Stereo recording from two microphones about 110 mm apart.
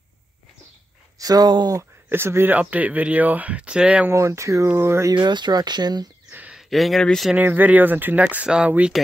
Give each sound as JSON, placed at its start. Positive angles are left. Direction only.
{"t": 1.1, "sound": "speech", "side_deg": -35}
{"t": 2.0, "sound": "speech", "side_deg": -20}
{"t": 4.1, "sound": "speech", "side_deg": -25}
{"t": 5.1, "sound": "speech", "side_deg": -45}
{"t": 6.3, "sound": "a sound", "side_deg": -15}
{"t": 6.7, "sound": "speech", "side_deg": 0}
{"t": 7.3, "sound": "speech", "side_deg": -15}